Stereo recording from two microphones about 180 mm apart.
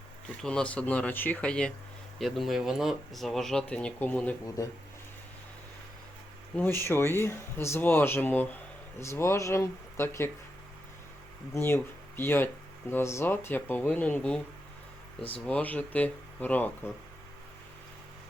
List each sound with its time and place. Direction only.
0.4 s speech: 5° left (ahead or behind)
4.4 s speech: 20° left (ahead or behind)
6.7 s speech: 10° left (ahead or behind)
11.5 s speech: 15° left (ahead or behind)
15.4 s speech: 5° left (ahead or behind)